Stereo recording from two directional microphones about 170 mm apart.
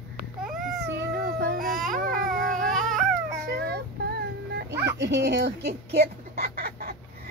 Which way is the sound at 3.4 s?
70° right (ahead or behind).